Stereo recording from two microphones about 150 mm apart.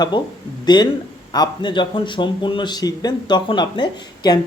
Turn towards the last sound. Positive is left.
turn(degrees=30)  # may be behind; listen again after turning